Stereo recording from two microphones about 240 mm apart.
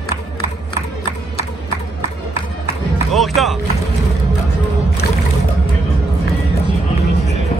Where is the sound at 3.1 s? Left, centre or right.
Centre.